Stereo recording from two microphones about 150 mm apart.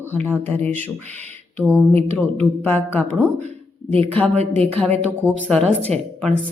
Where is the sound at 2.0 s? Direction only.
40° right (ahead or behind).